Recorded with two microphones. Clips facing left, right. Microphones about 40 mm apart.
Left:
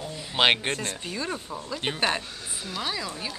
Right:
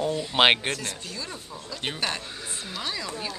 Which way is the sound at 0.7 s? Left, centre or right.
Left.